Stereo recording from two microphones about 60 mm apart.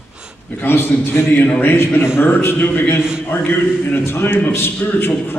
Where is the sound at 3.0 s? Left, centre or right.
Centre.